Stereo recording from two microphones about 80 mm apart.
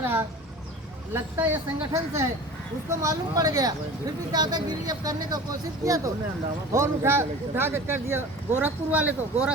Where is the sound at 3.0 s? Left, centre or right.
Right.